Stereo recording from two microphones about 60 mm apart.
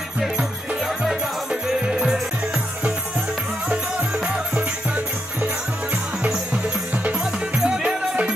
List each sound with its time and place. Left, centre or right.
0.2 s music: centre
4.3 s music: centre
7.1 s music: centre